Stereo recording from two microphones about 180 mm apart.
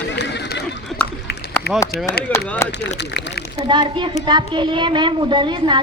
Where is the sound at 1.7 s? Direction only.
60° left (ahead or behind).